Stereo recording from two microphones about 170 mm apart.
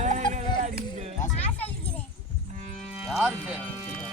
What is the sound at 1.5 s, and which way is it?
Children playing, 10° left (ahead or behind).